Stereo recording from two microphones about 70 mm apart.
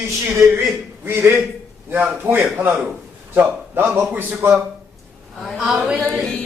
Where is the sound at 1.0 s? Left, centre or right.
Right.